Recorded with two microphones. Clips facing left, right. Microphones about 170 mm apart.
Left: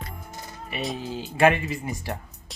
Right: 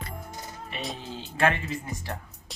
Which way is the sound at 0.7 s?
Centre (ahead or behind).